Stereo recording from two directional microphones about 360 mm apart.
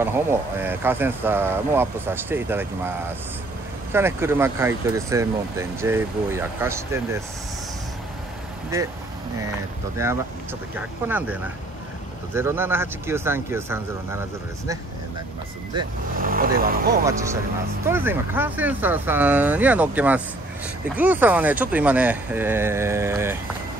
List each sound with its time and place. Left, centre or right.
0.0 s speech: centre
3.9 s speech: centre
10.0 s speech: centre
12.4 s speech: centre
16.2 s speech: right
17.0 s speech: centre